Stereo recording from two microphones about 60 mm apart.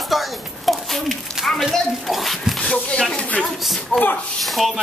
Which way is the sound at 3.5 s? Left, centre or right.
Centre.